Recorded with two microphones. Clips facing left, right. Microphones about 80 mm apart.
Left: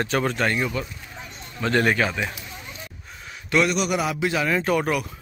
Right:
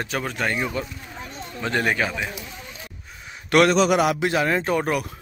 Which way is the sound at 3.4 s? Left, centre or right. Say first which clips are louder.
Right 5 dB; right.